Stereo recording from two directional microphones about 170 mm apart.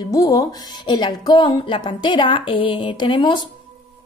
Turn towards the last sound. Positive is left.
turn(degrees=30)  # may be behind; listen again after turning